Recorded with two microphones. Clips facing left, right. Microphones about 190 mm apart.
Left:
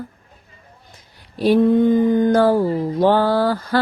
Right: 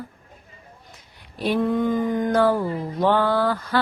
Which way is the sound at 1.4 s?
30° left (ahead or behind).